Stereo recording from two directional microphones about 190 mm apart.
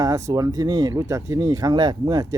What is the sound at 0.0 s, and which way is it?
Speech, 20° right (ahead or behind).